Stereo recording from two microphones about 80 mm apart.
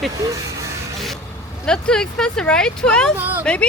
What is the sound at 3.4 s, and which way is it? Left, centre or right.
Speech, centre.